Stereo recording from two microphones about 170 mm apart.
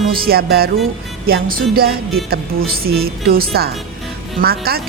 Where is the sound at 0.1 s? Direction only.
60° right (ahead or behind).